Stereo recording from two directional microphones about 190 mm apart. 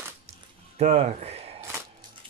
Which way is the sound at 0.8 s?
35° right (ahead or behind).